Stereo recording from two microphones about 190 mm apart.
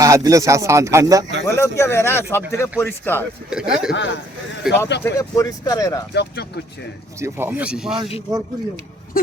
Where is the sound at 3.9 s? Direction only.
70° left (ahead or behind).